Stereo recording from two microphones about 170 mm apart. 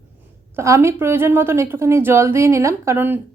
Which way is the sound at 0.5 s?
15° right (ahead or behind).